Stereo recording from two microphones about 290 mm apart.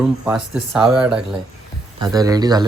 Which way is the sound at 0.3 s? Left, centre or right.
Centre.